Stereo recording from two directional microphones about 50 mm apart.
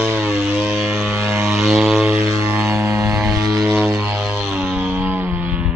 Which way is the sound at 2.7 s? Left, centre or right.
Right.